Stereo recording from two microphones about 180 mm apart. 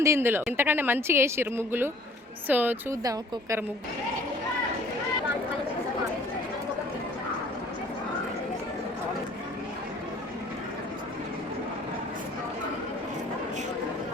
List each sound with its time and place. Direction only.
0.0 s a woman's voice: 15° right (ahead or behind)